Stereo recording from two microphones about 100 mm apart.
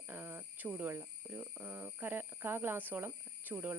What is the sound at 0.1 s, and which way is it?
Speech, 20° right (ahead or behind).